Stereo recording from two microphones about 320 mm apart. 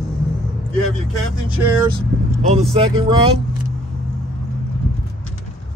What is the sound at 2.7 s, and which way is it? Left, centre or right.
Speech, centre.